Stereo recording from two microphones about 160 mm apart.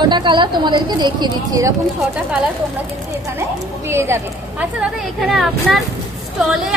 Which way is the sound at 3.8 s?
15° right (ahead or behind).